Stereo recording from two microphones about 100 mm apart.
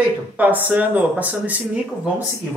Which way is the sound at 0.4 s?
15° right (ahead or behind).